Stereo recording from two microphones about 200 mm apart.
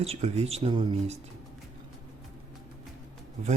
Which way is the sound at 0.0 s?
30° right (ahead or behind).